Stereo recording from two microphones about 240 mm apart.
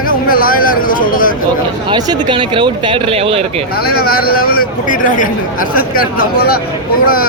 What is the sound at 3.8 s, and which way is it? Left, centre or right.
Speech, left.